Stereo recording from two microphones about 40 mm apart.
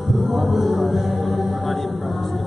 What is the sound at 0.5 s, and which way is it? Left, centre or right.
Music, centre.